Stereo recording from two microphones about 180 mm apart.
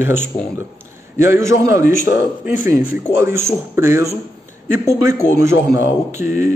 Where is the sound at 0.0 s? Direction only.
10° right (ahead or behind).